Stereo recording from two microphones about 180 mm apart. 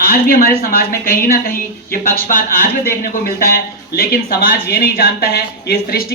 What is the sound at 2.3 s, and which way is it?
A woman's voice, 55° left (ahead or behind).